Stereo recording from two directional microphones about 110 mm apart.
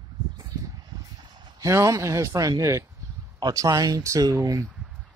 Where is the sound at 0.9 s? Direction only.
35° right (ahead or behind).